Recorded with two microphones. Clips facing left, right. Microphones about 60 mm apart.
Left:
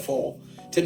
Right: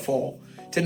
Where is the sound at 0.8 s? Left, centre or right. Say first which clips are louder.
Left 2 dB; right.